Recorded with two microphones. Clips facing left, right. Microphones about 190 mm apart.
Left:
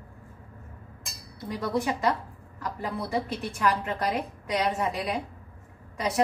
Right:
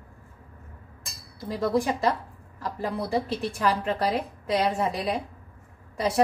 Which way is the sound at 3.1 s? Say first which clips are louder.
Right 3 dB; 30° right (ahead or behind).